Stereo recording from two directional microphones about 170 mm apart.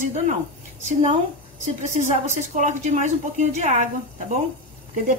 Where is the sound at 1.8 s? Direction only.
45° right (ahead or behind).